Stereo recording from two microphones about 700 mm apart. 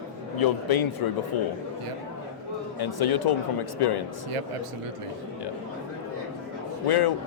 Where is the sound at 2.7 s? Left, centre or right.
Left.